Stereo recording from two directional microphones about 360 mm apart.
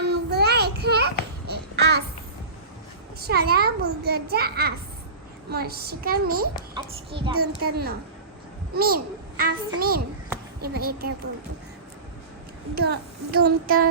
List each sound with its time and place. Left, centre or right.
0.0 s child singing: right
1.5 s babbling: right
3.2 s a child's voice: right
6.7 s a child's voice: centre
7.7 s a child's voice: right
12.7 s a child's voice: right